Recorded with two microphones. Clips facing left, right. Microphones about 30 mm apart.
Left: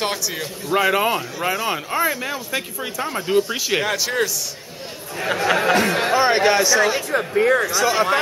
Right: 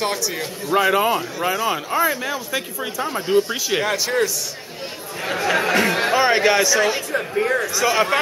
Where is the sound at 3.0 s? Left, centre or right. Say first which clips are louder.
Right 1 dB; centre.